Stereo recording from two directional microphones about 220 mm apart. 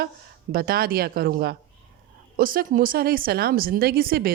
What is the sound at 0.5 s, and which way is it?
Speech, 40° right (ahead or behind).